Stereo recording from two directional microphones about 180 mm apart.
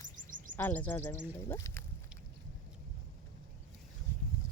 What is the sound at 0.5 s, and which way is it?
Speech, 10° left (ahead or behind).